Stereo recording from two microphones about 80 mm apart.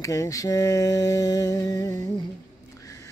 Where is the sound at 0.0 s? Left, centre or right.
Left.